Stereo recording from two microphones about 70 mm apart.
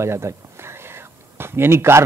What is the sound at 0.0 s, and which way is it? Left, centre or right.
A man's voice, right.